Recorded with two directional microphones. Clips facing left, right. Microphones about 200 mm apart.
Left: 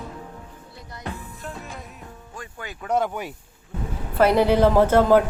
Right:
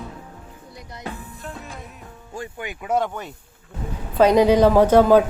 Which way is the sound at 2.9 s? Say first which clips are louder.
Right 1 dB; 5° right (ahead or behind).